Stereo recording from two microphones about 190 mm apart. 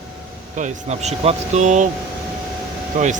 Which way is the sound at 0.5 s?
40° right (ahead or behind).